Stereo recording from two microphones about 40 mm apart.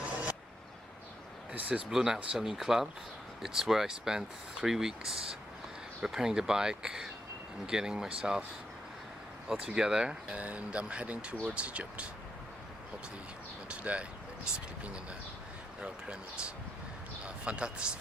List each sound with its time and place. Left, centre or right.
0.0 s vehicle: right
1.5 s speech: right
1.9 s speech: centre
9.5 s speech: centre
10.3 s speech: right
13.7 s speech: right
17.2 s speech: right